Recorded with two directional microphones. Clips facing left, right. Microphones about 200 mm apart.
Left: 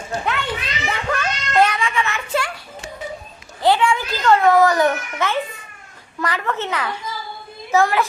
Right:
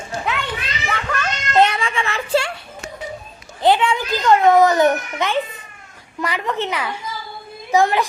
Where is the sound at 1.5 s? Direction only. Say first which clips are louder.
Right 1 dB; 25° right (ahead or behind).